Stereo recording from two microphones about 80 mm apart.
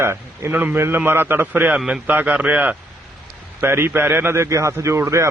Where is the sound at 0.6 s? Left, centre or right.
Right.